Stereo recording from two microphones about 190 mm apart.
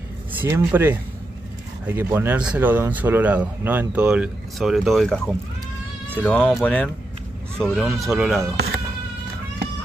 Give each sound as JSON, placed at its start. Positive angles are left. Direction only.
{"t": 0.3, "sound": "speech", "side_deg": -10}
{"t": 8.5, "sound": "insect", "side_deg": -55}